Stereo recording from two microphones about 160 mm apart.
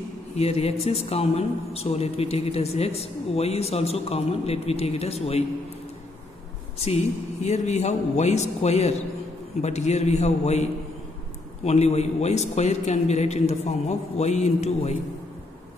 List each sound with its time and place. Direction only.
0.4 s speech: 40° left (ahead or behind)
7.4 s a man's voice: 45° left (ahead or behind)